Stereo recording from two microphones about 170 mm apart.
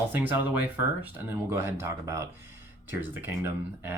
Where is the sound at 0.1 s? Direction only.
10° right (ahead or behind).